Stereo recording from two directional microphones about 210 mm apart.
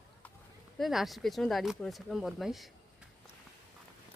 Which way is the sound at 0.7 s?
Centre (ahead or behind).